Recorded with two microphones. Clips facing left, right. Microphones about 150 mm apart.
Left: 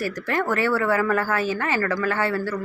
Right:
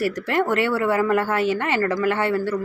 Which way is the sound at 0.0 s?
25° right (ahead or behind).